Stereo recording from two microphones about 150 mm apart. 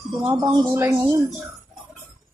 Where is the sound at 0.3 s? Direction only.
30° right (ahead or behind).